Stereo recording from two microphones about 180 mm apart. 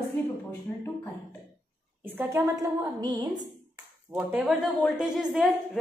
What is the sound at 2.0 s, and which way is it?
A woman's voice, 10° right (ahead or behind).